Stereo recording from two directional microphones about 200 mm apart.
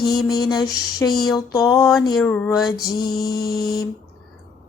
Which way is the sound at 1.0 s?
10° left (ahead or behind).